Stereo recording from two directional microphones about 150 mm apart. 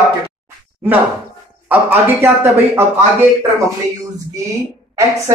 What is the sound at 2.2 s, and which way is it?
Speech, 20° right (ahead or behind).